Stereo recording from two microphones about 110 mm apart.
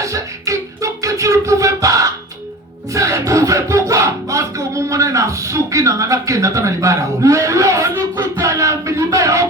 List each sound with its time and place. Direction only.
0.0 s music: 30° right (ahead or behind)